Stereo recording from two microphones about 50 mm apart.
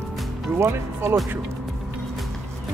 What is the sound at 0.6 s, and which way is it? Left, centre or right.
Speech, right.